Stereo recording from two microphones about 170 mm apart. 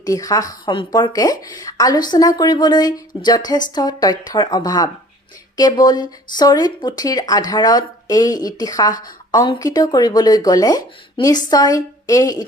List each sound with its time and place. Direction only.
0.0 s speech: 20° left (ahead or behind)